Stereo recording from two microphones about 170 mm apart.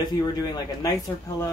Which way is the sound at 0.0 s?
20° left (ahead or behind).